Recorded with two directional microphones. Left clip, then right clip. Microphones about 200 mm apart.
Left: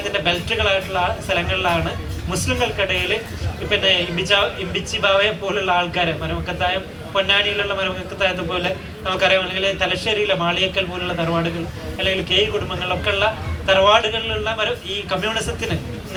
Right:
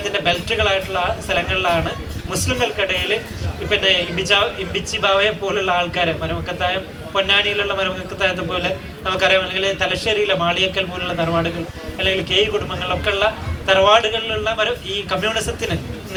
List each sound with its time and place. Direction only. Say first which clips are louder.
0.0 s a man's voice: right 1 dB; 25° right (ahead or behind)